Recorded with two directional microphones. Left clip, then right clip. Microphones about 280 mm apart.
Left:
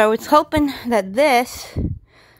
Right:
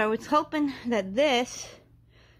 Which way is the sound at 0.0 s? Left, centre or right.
Left.